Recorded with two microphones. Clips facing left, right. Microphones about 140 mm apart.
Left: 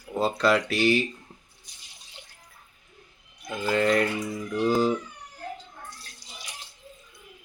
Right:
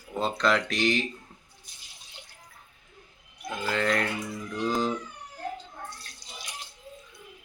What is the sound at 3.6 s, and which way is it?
Speech, 10° left (ahead or behind).